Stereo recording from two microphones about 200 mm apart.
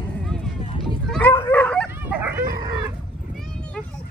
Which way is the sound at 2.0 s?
10° right (ahead or behind).